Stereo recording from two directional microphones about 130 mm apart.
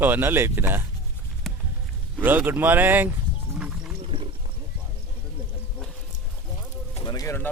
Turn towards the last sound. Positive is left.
turn(degrees=30)  # may be behind; listen again after turning